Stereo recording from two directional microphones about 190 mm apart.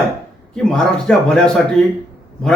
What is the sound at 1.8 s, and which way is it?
Speech, 30° right (ahead or behind).